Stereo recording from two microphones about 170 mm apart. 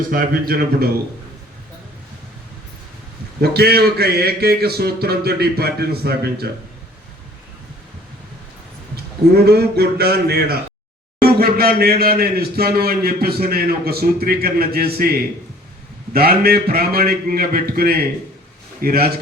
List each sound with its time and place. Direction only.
0.1 s a man's voice: 60° right (ahead or behind)
3.4 s a man's voice: 70° right (ahead or behind)
9.3 s a man's voice: 70° right (ahead or behind)